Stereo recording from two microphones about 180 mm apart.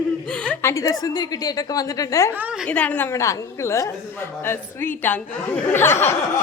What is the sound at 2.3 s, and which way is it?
Speech, 10° right (ahead or behind).